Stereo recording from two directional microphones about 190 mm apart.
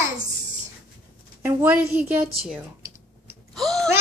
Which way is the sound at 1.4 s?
10° right (ahead or behind).